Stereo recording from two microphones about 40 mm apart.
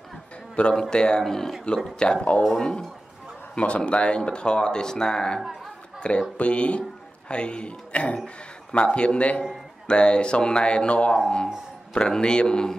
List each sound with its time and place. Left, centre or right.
0.7 s speech: left
1.2 s speech: centre
2.0 s speech: left
5.9 s a sound: left
6.3 s speech: left